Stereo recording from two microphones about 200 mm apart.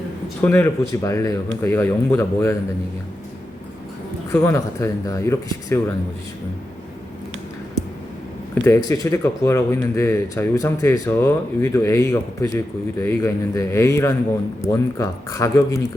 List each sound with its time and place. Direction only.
0.4 s speech: 10° left (ahead or behind)
4.3 s speech: 15° left (ahead or behind)
8.6 s speech: 15° left (ahead or behind)